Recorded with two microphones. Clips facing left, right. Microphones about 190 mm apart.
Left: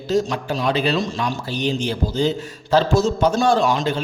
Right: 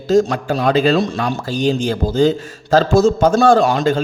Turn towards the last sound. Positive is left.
turn(degrees=-50)  # may be behind; listen again after turning